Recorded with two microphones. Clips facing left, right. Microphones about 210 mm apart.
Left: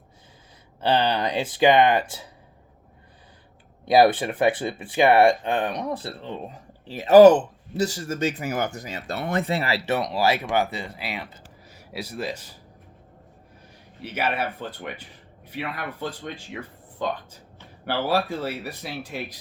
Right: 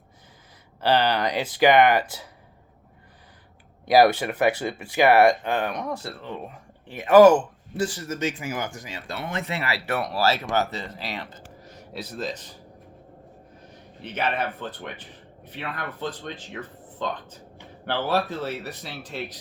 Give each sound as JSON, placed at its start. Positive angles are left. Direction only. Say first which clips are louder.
{"t": 0.8, "sound": "speech", "louder": "even", "side_deg": 25}
{"t": 3.8, "sound": "speech", "louder": "even", "side_deg": 25}
{"t": 7.3, "sound": "speech", "louder": "left 1 dB", "side_deg": 25}
{"t": 14.0, "sound": "speech", "louder": "even", "side_deg": 10}